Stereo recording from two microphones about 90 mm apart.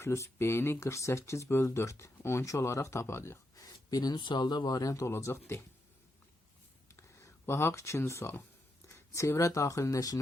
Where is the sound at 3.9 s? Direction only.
45° left (ahead or behind).